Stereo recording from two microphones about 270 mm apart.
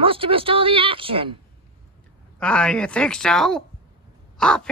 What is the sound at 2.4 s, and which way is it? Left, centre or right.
A woman's voice, centre.